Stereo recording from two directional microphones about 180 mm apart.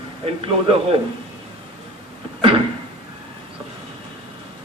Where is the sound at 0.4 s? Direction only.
30° right (ahead or behind).